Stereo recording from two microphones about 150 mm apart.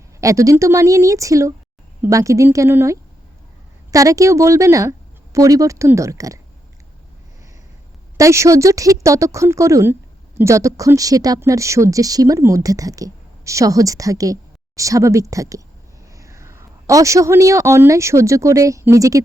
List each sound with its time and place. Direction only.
0.2 s speech: 20° right (ahead or behind)
8.2 s speech: 20° right (ahead or behind)